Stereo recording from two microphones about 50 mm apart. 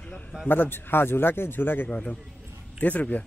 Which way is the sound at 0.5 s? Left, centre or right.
Left.